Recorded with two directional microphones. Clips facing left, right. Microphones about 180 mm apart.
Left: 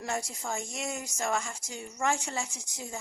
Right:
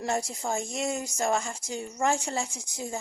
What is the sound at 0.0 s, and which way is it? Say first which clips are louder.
Speech: right 5 dB; 30° right (ahead or behind).